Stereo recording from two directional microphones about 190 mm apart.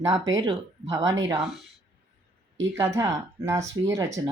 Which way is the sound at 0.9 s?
15° right (ahead or behind).